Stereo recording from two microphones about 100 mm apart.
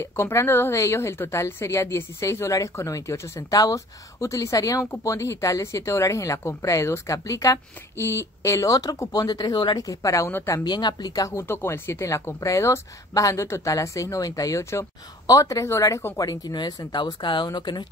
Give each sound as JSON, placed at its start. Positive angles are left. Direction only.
{"t": 0.0, "sound": "a woman's voice", "side_deg": 25}
{"t": 10.6, "sound": "a woman's voice", "side_deg": 45}
{"t": 16.2, "sound": "speech", "side_deg": 40}